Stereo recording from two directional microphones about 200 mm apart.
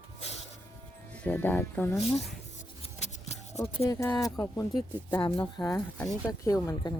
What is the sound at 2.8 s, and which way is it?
Scissors, 35° left (ahead or behind).